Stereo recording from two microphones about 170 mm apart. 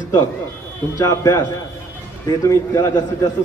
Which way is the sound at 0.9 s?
20° left (ahead or behind).